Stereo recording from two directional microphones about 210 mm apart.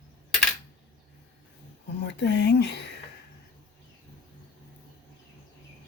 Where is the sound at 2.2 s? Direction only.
55° left (ahead or behind).